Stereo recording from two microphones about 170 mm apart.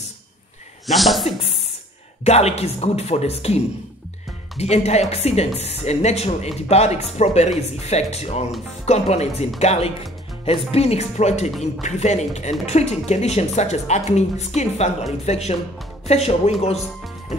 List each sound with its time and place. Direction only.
0.8 s speech: centre (ahead or behind)
2.2 s speech: 40° left (ahead or behind)